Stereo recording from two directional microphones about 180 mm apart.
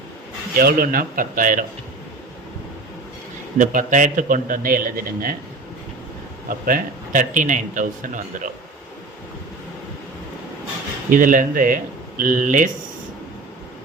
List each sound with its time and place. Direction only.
0.5 s a man's voice: 55° right (ahead or behind)
3.6 s a man's voice: 45° right (ahead or behind)
6.7 s a man's voice: 50° right (ahead or behind)
11.1 s a man's voice: 50° right (ahead or behind)